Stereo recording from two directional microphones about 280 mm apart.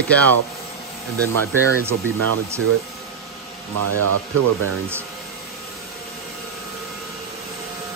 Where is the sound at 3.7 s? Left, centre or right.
Right.